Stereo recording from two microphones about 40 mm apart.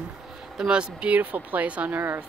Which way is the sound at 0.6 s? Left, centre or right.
Right.